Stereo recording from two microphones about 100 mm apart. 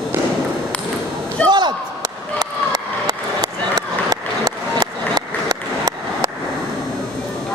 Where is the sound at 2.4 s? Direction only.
40° right (ahead or behind).